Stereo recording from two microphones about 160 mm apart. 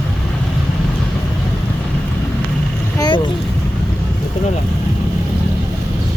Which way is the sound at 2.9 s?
25° left (ahead or behind).